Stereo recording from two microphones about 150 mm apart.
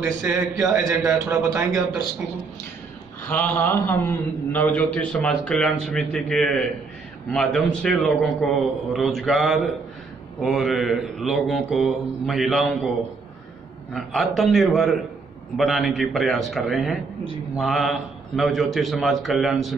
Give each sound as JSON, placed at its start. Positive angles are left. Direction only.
{"t": 0.0, "sound": "a man's voice", "side_deg": -20}
{"t": 3.3, "sound": "a man's voice", "side_deg": 10}
{"t": 7.3, "sound": "mantra", "side_deg": 5}
{"t": 13.9, "sound": "mantra", "side_deg": 0}